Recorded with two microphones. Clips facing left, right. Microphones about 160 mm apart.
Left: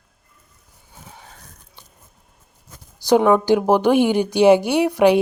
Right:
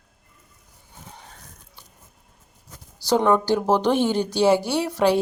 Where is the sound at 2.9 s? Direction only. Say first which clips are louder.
Left 4 dB; 15° left (ahead or behind).